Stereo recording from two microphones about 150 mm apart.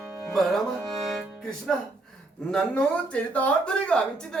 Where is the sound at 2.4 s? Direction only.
5° left (ahead or behind).